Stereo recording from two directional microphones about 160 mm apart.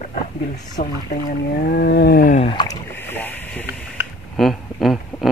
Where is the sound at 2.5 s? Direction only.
25° left (ahead or behind).